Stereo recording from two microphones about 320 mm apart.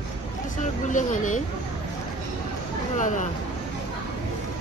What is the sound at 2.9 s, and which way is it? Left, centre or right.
Speech, left.